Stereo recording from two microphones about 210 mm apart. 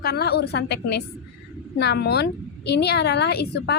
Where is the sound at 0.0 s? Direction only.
50° left (ahead or behind).